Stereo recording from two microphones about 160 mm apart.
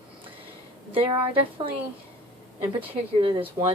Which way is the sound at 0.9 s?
35° right (ahead or behind).